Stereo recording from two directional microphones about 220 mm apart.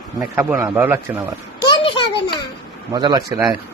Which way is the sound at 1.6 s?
20° left (ahead or behind).